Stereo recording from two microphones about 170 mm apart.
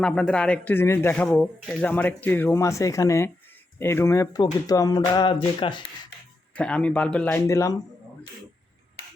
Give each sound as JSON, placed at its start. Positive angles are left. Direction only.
{"t": 0.0, "sound": "speech", "side_deg": 5}
{"t": 6.5, "sound": "speech", "side_deg": 5}